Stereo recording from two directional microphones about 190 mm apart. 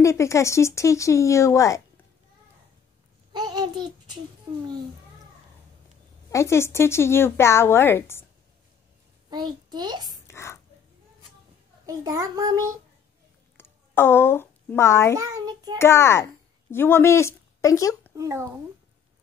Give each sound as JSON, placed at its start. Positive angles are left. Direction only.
{"t": 0.0, "sound": "a woman's voice", "side_deg": 15}
{"t": 3.3, "sound": "a sound", "side_deg": -20}
{"t": 6.3, "sound": "a woman's voice", "side_deg": 15}
{"t": 9.3, "sound": "a child's voice", "side_deg": -25}
{"t": 10.2, "sound": "a sound", "side_deg": 15}
{"t": 11.8, "sound": "a child's voice", "side_deg": -20}
{"t": 13.6, "sound": "a woman's voice", "side_deg": 10}
{"t": 15.1, "sound": "a child's voice", "side_deg": -20}
{"t": 15.8, "sound": "a woman's voice", "side_deg": 15}
{"t": 18.1, "sound": "speech", "side_deg": -15}